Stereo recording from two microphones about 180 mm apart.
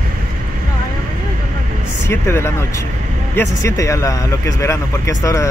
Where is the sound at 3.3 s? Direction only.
15° left (ahead or behind).